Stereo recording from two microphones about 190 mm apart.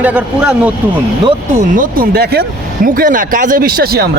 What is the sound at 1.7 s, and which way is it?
Speech, 45° right (ahead or behind).